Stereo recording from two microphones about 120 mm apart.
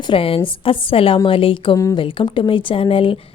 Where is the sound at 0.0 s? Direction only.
45° left (ahead or behind).